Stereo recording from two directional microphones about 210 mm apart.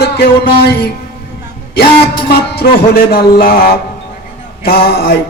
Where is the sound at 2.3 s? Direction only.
45° left (ahead or behind).